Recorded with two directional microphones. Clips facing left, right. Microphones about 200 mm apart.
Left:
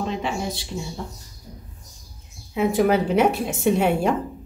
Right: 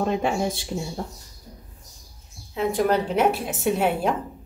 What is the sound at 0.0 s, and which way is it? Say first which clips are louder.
Speech: right 3 dB; 50° right (ahead or behind).